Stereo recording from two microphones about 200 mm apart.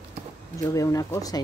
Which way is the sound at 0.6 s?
15° left (ahead or behind).